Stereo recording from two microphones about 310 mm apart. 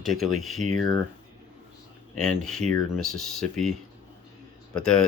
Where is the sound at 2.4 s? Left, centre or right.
Centre.